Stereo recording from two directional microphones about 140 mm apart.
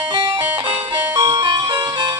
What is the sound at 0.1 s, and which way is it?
Music, 35° right (ahead or behind).